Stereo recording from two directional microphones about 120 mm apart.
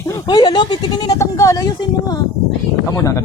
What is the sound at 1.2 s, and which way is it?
Speech, 25° left (ahead or behind).